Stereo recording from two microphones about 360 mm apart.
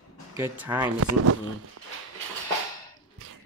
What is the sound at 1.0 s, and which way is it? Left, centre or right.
Speech, right.